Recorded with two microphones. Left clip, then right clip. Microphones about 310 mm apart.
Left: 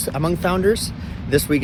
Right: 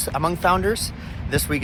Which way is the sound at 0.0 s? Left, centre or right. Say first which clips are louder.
Right 1 dB; centre.